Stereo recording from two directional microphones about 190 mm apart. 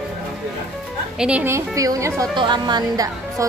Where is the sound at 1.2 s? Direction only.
10° right (ahead or behind).